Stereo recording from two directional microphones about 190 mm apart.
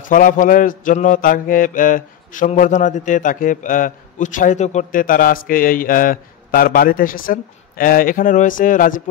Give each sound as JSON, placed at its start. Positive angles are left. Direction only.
{"t": 0.0, "sound": "mantra", "side_deg": 45}